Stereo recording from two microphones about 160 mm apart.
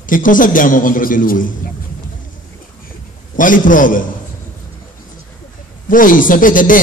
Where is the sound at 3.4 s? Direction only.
55° left (ahead or behind).